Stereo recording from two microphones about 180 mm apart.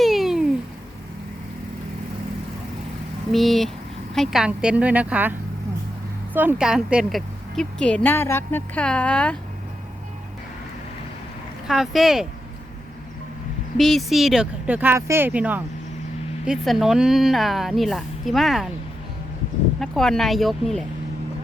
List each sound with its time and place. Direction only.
0.0 s a sound: centre (ahead or behind)
3.3 s a woman's voice: centre (ahead or behind)
6.3 s a woman's voice: 10° right (ahead or behind); by 9.4 s 5° left (ahead or behind)
11.7 s a woman's voice: centre (ahead or behind)
13.7 s a woman's voice: centre (ahead or behind)
19.8 s a woman's voice: centre (ahead or behind)